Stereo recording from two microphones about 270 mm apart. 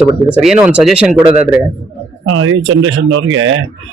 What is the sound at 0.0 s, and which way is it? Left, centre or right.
Speech, centre.